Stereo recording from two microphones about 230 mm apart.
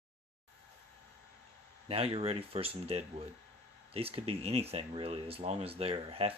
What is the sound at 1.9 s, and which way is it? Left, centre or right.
Speech, right.